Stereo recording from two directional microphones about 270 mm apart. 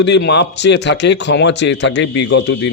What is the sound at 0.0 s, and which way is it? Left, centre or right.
Speech, left.